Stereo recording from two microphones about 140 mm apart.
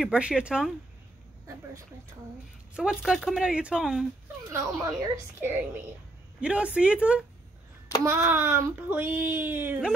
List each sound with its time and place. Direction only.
0.0 s speech: 5° right (ahead or behind)
2.7 s speech: 5° right (ahead or behind)
4.5 s speech: 20° right (ahead or behind)